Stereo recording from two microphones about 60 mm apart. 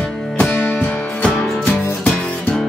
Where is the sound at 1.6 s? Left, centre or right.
Left.